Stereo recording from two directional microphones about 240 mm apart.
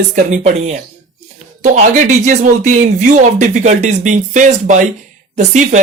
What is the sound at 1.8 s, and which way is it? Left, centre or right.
Speech, right.